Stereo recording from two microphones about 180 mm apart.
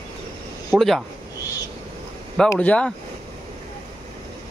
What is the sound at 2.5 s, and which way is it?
Speech, 5° left (ahead or behind).